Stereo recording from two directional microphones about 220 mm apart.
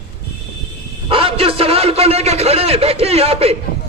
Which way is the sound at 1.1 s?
25° right (ahead or behind).